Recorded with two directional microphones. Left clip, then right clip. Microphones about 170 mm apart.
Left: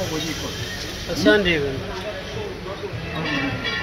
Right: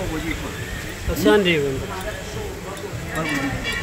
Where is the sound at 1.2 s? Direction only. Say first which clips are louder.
Right 1 dB; 90° right.